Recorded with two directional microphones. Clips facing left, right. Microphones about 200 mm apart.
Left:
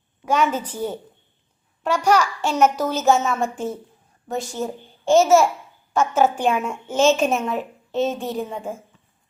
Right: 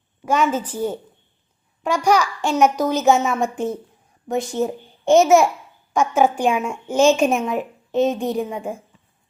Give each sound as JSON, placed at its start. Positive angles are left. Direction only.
{"t": 0.3, "sound": "a woman's voice", "side_deg": -10}